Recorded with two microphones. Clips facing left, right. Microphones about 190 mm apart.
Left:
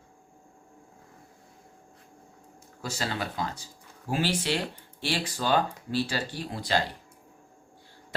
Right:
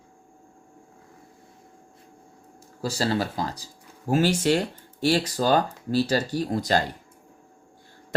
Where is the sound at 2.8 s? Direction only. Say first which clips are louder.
Right 7 dB; 35° right (ahead or behind).